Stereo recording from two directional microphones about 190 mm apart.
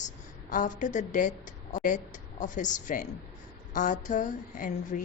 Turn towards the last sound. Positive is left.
turn(degrees=45)  # may be behind; listen again after turning